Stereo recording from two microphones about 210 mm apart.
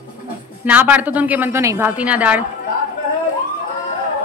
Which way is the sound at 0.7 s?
10° right (ahead or behind).